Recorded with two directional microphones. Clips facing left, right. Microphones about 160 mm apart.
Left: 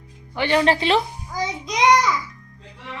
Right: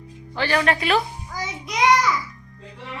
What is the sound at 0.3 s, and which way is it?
A child's voice, 20° left (ahead or behind).